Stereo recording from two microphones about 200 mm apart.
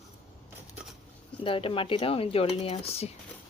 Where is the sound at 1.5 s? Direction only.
25° left (ahead or behind).